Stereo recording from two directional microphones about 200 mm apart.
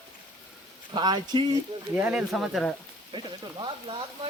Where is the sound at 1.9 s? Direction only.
5° right (ahead or behind).